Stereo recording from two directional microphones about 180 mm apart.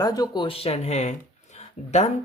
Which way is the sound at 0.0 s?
20° left (ahead or behind).